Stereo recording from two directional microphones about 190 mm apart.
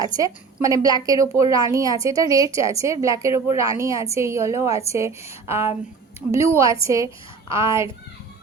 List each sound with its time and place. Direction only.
0.0 s a woman's voice: 15° right (ahead or behind)